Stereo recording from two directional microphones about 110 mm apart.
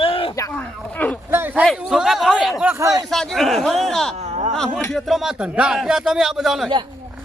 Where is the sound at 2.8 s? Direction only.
35° right (ahead or behind).